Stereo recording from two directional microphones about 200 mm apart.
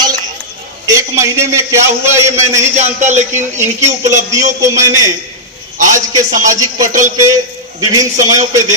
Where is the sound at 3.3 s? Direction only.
15° right (ahead or behind).